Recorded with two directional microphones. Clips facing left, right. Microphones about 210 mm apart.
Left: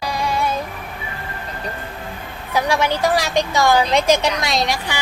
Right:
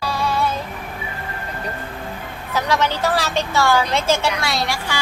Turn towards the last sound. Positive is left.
turn(degrees=20)  # may be behind; listen again after turning